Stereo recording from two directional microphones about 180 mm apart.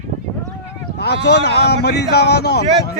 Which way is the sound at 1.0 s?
70° left (ahead or behind).